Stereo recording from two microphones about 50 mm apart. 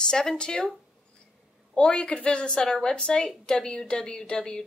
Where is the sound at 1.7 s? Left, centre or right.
Left.